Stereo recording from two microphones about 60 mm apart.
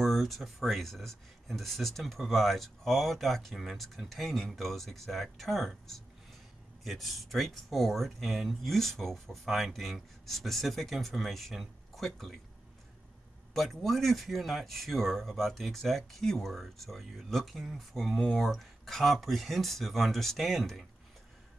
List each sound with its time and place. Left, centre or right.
0.0 s speech: centre
13.5 s speech: centre